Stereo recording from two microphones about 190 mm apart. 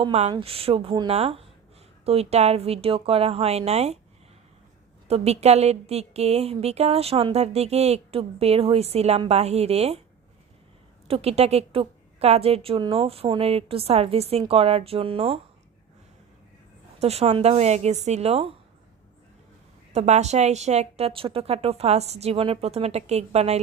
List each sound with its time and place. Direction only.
0.0 s a woman's voice: 35° right (ahead or behind)
5.0 s a woman's voice: 35° right (ahead or behind)
11.1 s a woman's voice: 35° right (ahead or behind)
17.0 s a woman's voice: 35° right (ahead or behind)
19.9 s a woman's voice: 35° right (ahead or behind)